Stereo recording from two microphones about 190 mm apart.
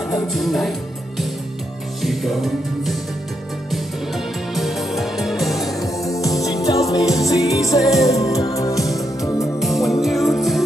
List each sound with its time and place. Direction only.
0.1 s speech: centre (ahead or behind)
2.0 s music: centre (ahead or behind)
4.6 s music: centre (ahead or behind)
5.8 s music: 15° left (ahead or behind)
9.6 s music: centre (ahead or behind)